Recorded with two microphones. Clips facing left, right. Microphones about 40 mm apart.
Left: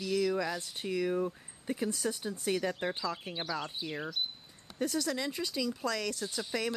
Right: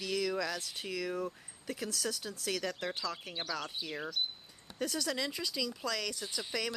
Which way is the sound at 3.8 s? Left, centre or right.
Centre.